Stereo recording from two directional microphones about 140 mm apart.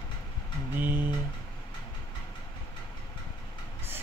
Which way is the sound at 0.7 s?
15° right (ahead or behind).